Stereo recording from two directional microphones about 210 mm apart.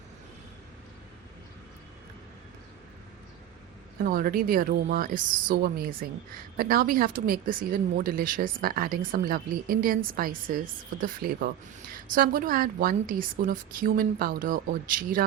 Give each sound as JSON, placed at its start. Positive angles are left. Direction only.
{"t": 3.9, "sound": "a woman's voice", "side_deg": -45}